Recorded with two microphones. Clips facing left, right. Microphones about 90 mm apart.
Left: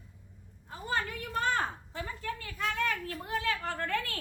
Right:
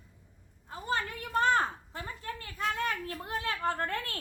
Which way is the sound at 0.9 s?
35° right (ahead or behind).